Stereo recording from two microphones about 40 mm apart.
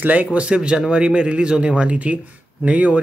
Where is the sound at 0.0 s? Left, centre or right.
Right.